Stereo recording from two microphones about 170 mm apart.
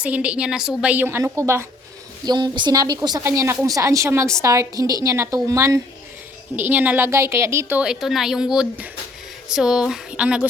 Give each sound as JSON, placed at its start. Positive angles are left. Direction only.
{"t": 0.0, "sound": "a woman's voice", "side_deg": -5}
{"t": 2.2, "sound": "a woman's voice", "side_deg": -25}